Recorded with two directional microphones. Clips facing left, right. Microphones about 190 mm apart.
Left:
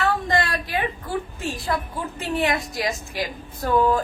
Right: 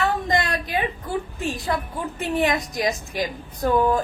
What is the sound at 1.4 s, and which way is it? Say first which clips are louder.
A woman's voice: right 1 dB; 20° right (ahead or behind).